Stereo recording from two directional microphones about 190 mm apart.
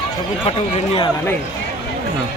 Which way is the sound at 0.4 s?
30° left (ahead or behind).